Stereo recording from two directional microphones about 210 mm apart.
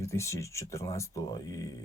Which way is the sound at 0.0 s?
15° left (ahead or behind).